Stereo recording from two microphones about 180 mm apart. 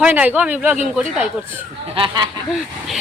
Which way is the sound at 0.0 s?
10° right (ahead or behind).